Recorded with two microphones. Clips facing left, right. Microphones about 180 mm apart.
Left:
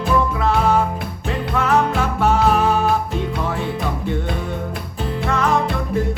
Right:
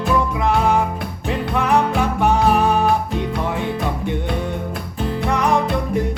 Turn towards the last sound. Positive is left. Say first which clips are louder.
# right 1 dB
turn(degrees=-15)  # may be behind; listen again after turning